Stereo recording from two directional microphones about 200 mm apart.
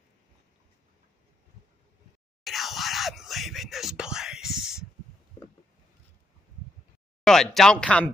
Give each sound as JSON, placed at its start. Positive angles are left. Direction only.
{"t": 2.4, "sound": "whispering", "side_deg": 0}
{"t": 4.6, "sound": "a sound", "side_deg": -5}
{"t": 7.2, "sound": "speech", "side_deg": 0}